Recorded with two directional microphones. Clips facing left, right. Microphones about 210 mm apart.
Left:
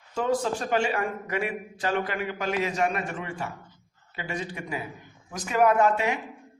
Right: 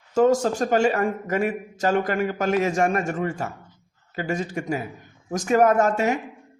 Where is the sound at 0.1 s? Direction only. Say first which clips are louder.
Right 7 dB; 45° right (ahead or behind).